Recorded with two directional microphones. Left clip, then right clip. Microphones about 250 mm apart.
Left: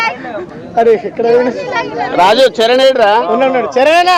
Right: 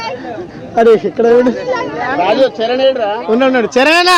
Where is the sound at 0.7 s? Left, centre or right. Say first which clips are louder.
Right 1 dB; right.